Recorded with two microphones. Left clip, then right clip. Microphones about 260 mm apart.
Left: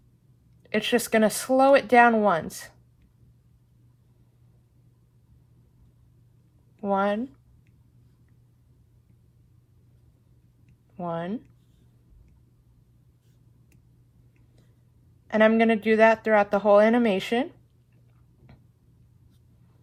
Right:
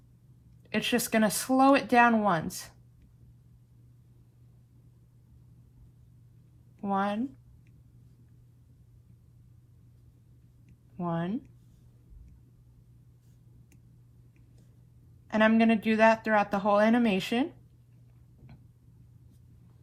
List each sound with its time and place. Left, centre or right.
0.6 s a woman's voice: left
6.8 s a woman's voice: left
10.9 s speech: left
15.3 s a woman's voice: left